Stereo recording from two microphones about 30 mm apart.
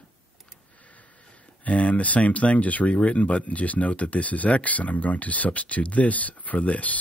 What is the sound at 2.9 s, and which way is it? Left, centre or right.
Speech, left.